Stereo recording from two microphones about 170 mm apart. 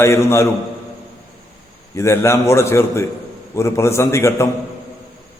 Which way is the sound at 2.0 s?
15° left (ahead or behind).